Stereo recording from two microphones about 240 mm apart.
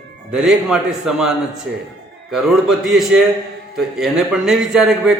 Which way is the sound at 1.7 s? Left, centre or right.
Right.